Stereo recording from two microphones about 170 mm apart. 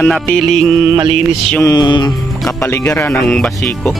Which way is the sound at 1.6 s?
25° left (ahead or behind).